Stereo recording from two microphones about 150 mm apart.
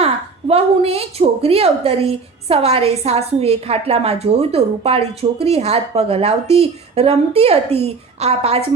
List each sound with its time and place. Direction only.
0.0 s a woman's voice: 40° right (ahead or behind)